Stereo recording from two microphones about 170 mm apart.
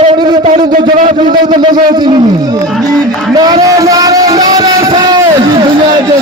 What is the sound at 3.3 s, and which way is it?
Speech, 20° right (ahead or behind).